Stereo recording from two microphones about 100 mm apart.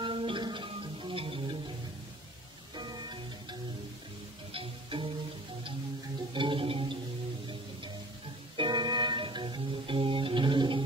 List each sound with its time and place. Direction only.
0.0 s music: 60° right (ahead or behind)
2.7 s music: 50° right (ahead or behind)
4.6 s music: 65° right (ahead or behind)
6.3 s a sound: 55° right (ahead or behind)
8.5 s music: 50° right (ahead or behind)